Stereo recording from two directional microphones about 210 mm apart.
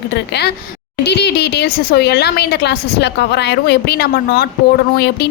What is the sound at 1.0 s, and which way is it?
Speech, 55° left (ahead or behind).